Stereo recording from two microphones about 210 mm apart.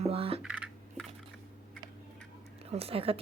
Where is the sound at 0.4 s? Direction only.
5° right (ahead or behind).